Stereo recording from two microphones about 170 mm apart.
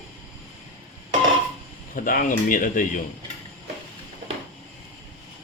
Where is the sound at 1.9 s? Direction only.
55° left (ahead or behind).